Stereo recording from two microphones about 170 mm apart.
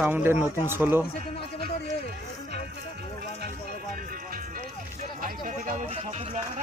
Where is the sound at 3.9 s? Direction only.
60° right (ahead or behind).